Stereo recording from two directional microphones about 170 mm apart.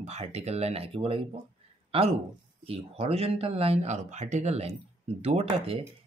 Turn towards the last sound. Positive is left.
turn(degrees=-35)  # may be behind; listen again after turning